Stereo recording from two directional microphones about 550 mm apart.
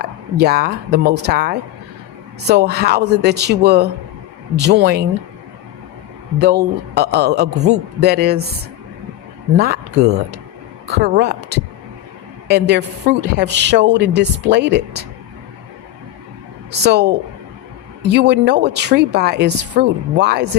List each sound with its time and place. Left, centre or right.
0.0 s a woman's voice: centre
6.4 s a woman's voice: centre
9.6 s a woman's voice: centre
12.5 s a woman's voice: centre
16.8 s a woman's voice: centre
18.1 s a woman's voice: centre